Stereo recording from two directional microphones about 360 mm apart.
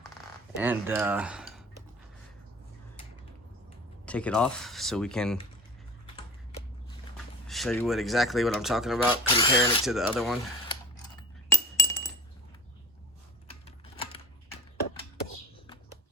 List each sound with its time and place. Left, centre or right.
0.6 s speech: centre
4.0 s speech: centre
7.4 s speech: centre
9.2 s speech: centre
9.8 s speech: centre
11.2 s chink: centre
13.7 s typing: centre